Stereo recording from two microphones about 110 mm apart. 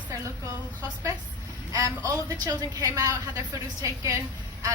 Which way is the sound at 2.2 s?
35° right (ahead or behind).